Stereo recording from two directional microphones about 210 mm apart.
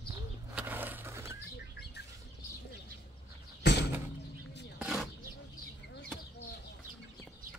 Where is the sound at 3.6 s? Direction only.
55° left (ahead or behind).